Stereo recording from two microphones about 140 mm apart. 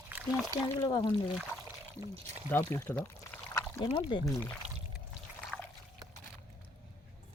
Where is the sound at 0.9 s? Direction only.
35° left (ahead or behind).